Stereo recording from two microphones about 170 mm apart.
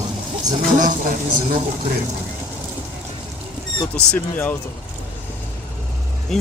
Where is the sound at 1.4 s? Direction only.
30° right (ahead or behind).